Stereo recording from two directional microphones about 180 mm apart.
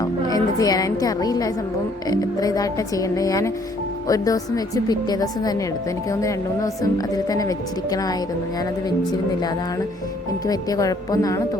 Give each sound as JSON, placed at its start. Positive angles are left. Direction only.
{"t": 0.0, "sound": "a woman's voice", "side_deg": 20}
{"t": 10.4, "sound": "a woman's voice", "side_deg": 20}